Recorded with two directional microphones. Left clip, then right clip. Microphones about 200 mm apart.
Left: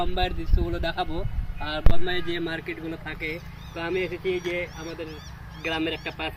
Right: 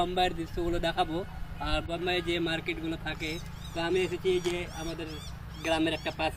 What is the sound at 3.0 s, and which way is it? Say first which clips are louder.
Speech: left 3 dB; 50° right (ahead or behind).